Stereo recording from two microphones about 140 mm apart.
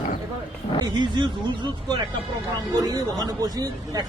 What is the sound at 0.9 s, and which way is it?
Speech, 30° right (ahead or behind).